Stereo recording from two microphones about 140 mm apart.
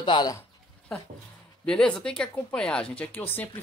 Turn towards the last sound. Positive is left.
turn(degrees=15)  # may be behind; listen again after turning